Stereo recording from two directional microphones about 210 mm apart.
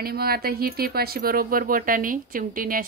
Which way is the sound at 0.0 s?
45° right (ahead or behind).